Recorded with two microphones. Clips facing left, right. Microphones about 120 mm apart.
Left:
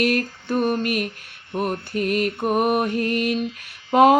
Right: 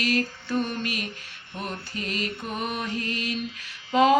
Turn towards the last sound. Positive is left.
turn(degrees=55)  # may be behind; listen again after turning